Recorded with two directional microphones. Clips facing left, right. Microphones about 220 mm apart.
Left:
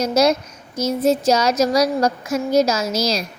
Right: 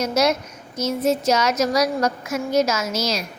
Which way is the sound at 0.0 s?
35° left (ahead or behind).